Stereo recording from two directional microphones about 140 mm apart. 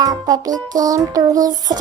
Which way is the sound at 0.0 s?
25° right (ahead or behind).